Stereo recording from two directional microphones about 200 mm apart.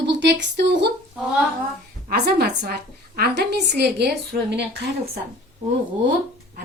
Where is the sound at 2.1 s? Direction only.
50° right (ahead or behind).